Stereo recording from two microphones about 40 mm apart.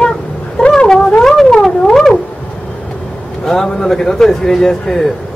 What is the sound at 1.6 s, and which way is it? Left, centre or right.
Theremin, centre.